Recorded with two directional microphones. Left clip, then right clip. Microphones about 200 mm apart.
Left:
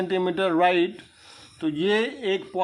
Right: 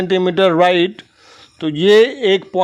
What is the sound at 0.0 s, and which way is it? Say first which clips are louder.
A man's voice: right 10 dB; 35° right (ahead or behind).